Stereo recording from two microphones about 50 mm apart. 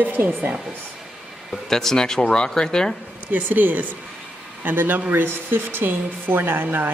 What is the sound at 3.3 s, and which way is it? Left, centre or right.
Speech, right.